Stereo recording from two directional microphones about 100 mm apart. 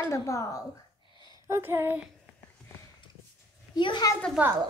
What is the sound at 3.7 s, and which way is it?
Speech, 50° left (ahead or behind).